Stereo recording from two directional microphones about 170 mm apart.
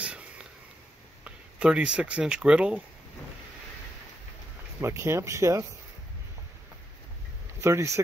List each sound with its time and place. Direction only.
0.0 s whispering: 5° right (ahead or behind)
1.2 s speech: 5° right (ahead or behind)
4.7 s speech: 15° right (ahead or behind)
7.6 s speech: 15° right (ahead or behind)